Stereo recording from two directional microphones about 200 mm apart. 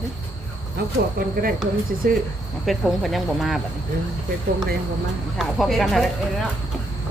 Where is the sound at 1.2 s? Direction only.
45° right (ahead or behind).